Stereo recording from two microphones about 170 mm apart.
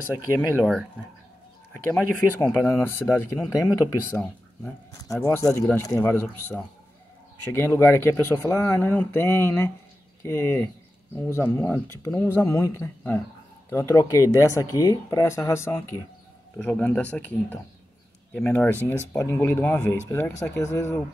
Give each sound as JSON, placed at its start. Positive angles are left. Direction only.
{"t": 0.6, "sound": "speech", "side_deg": 0}
{"t": 1.8, "sound": "speech", "side_deg": 15}
{"t": 4.9, "sound": "speech", "side_deg": 20}
{"t": 7.5, "sound": "speech", "side_deg": 15}